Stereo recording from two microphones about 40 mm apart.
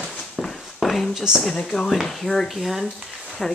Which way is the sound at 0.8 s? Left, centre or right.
Centre.